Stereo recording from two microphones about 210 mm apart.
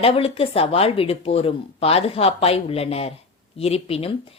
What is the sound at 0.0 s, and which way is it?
A woman's voice, 25° left (ahead or behind).